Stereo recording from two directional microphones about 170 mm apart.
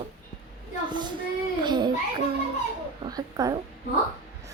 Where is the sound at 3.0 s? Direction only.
20° right (ahead or behind).